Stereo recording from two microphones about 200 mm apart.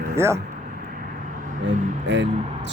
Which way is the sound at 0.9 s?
45° right (ahead or behind).